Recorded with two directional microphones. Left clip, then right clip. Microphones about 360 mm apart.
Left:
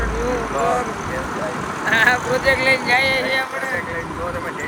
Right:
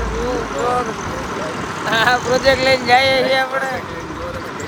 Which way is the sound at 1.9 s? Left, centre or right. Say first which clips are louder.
Even; centre.